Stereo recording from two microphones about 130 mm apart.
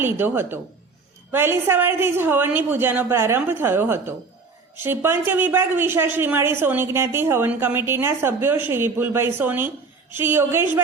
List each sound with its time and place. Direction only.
0.0 s a man's voice: 15° right (ahead or behind)